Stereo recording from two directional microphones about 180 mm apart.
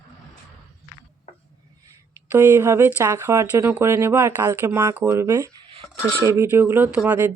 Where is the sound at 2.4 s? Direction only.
15° right (ahead or behind).